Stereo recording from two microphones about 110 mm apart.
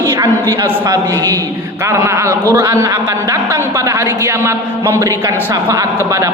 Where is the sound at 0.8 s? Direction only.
40° right (ahead or behind).